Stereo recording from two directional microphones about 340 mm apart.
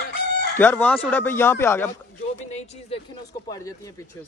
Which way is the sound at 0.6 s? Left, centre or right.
Centre.